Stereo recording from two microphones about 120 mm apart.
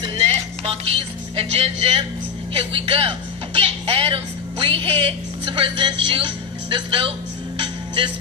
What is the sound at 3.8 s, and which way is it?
A woman's voice, 50° right (ahead or behind).